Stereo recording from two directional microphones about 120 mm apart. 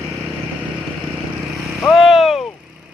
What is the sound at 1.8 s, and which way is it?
Vehicle, 5° right (ahead or behind).